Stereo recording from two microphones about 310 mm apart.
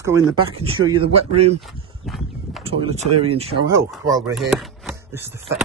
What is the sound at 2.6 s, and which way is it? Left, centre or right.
Speech, centre.